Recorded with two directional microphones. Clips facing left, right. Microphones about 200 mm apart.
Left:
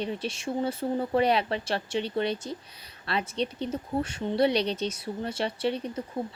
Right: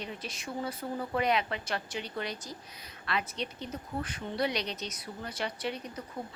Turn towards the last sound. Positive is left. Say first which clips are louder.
# left 7 dB
turn(degrees=30)  # may be behind; listen again after turning